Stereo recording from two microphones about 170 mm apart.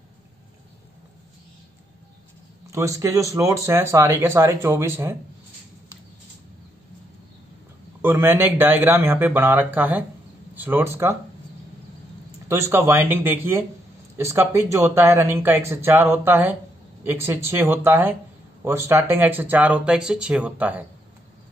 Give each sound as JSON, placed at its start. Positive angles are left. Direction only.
{"t": 2.7, "sound": "speech", "side_deg": -20}
{"t": 8.0, "sound": "speech", "side_deg": -15}
{"t": 12.4, "sound": "speech", "side_deg": -15}